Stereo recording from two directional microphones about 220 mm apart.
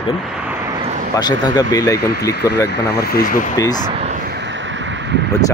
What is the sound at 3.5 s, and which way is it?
Speech, 15° left (ahead or behind).